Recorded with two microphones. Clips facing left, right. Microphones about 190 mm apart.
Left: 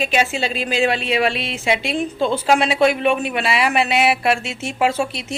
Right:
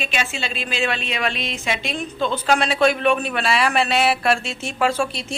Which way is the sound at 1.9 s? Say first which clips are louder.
Left 4 dB; 30° left (ahead or behind).